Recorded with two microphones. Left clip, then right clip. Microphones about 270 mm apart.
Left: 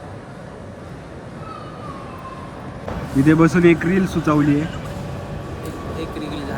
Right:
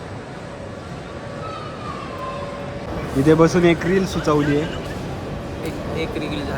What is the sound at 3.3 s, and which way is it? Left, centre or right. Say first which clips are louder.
Speech: even; centre.